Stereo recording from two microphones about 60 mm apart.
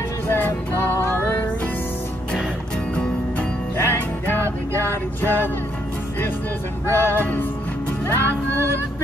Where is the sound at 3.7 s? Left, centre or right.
Left.